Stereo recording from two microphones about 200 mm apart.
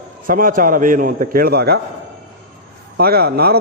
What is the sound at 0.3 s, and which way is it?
A man's voice, 45° right (ahead or behind).